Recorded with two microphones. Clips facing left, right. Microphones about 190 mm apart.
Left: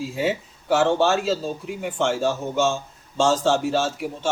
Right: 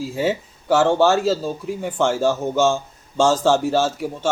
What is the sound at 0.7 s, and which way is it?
Speech, 45° right (ahead or behind).